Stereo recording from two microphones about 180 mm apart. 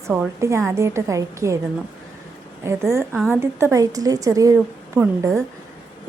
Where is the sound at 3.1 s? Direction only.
Centre (ahead or behind).